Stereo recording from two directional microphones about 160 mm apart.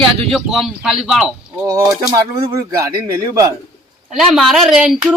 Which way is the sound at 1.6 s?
20° right (ahead or behind).